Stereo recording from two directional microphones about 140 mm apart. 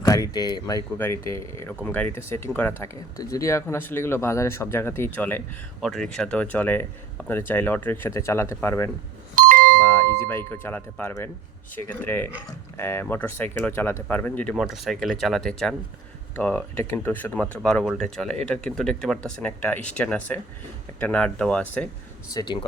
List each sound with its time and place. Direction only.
0.0 s speech: 25° left (ahead or behind)
0.9 s speech: 15° left (ahead or behind)
5.8 s speech: 5° left (ahead or behind)
9.3 s doorbell: 75° right (ahead or behind)
9.8 s a sound: 20° left (ahead or behind)
10.2 s speech: 15° left (ahead or behind)
14.5 s speech: centre (ahead or behind)
22.3 s speech: 30° left (ahead or behind)